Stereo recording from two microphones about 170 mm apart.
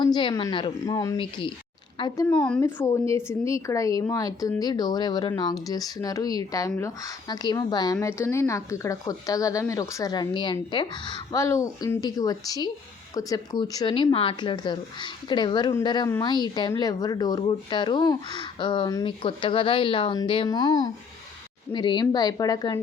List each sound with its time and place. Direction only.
0.0 s speech: 25° left (ahead or behind)
2.3 s speech: 5° left (ahead or behind); by 22.8 s 25° left (ahead or behind)